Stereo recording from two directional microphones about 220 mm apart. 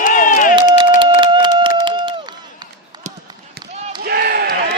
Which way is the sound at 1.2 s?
20° right (ahead or behind).